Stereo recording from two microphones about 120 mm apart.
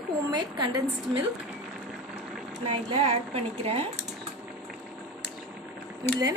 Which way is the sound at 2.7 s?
50° right (ahead or behind).